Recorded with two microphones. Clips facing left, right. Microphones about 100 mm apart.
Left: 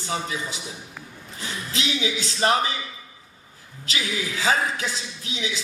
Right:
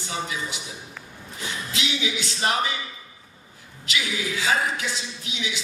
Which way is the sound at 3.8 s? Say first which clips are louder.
Even; 35° left (ahead or behind).